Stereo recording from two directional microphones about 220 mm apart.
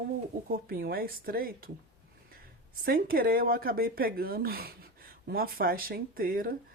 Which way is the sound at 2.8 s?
40° right (ahead or behind).